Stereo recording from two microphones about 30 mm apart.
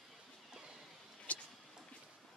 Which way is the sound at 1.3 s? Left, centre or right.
Left.